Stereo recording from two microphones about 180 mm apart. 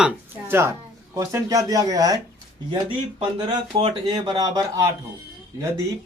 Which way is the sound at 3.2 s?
25° right (ahead or behind).